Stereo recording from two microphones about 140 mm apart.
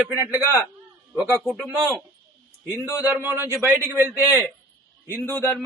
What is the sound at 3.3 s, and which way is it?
Speech, 20° right (ahead or behind).